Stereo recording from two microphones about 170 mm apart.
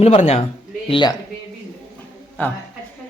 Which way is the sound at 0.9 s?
25° left (ahead or behind).